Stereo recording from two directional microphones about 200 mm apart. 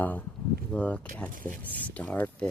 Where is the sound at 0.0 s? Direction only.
10° left (ahead or behind).